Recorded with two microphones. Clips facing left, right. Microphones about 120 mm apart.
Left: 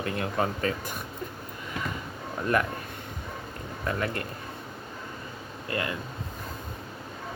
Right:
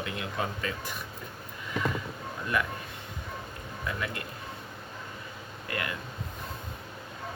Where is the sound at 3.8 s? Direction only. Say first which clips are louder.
Left 5 dB; 45° left (ahead or behind).